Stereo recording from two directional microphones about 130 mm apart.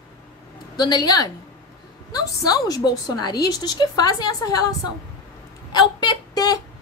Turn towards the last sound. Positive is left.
turn(degrees=30)  # may be behind; listen again after turning